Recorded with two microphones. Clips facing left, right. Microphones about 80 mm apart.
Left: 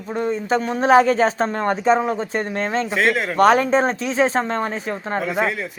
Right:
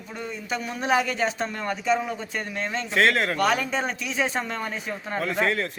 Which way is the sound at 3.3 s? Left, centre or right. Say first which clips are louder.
Left 9 dB; left.